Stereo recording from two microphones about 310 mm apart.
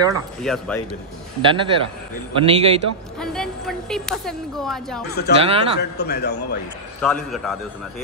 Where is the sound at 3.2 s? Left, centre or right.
Centre.